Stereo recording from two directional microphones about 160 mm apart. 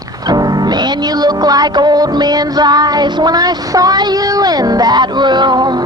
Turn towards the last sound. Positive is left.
turn(degrees=-25)  # may be behind; listen again after turning